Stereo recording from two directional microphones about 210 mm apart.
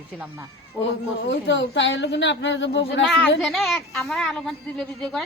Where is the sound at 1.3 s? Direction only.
55° left (ahead or behind).